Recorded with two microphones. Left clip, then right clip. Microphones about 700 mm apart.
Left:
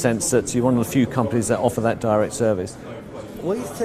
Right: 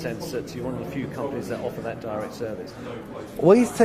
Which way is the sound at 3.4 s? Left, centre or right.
Right.